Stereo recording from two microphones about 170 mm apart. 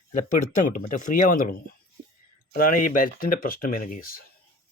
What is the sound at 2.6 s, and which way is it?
Speech, 55° left (ahead or behind).